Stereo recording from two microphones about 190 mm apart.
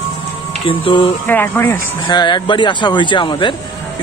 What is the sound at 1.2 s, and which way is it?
Speech, 10° left (ahead or behind).